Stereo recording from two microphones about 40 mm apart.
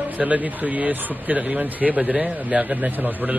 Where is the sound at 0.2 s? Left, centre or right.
Right.